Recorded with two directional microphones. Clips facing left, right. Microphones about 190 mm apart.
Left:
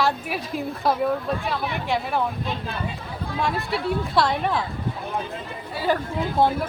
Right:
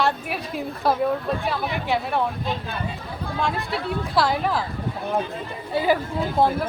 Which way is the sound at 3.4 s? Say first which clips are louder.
Left 1 dB; centre (ahead or behind).